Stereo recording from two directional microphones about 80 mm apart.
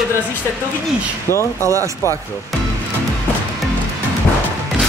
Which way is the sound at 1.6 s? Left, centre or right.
Right.